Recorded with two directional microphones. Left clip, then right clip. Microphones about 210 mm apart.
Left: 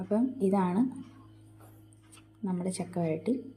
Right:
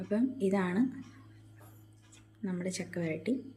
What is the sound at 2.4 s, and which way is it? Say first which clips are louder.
Speech: left 2 dB; 10° left (ahead or behind).